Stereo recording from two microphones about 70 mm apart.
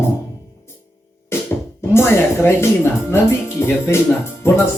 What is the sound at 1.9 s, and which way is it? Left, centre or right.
Speech, left.